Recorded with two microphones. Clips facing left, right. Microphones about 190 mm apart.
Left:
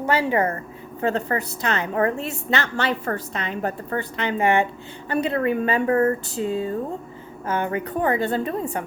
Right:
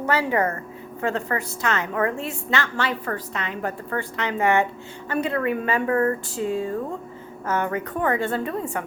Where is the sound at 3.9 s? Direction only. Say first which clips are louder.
Left 1 dB; 25° left (ahead or behind).